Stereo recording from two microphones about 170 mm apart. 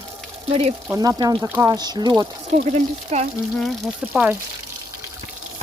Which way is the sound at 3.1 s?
40° right (ahead or behind).